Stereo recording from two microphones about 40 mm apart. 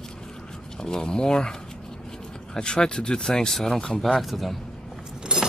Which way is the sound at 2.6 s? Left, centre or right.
Left.